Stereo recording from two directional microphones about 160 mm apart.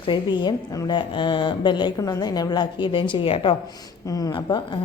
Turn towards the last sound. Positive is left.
turn(degrees=25)  # may be behind; listen again after turning